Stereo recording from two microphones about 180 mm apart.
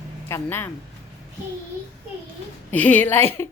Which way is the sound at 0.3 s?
15° left (ahead or behind).